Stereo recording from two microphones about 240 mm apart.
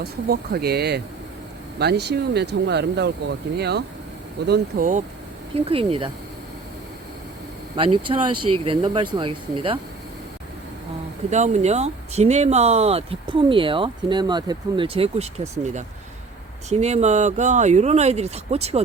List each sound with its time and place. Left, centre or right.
0.0 s speech: right
7.8 s speech: right
8.4 s speech: right
8.6 s speech: right
11.3 s speech: right